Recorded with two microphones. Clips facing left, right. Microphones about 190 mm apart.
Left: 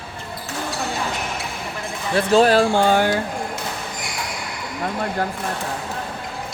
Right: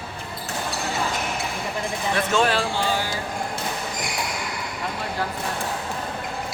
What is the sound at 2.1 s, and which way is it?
Speech, 35° left (ahead or behind).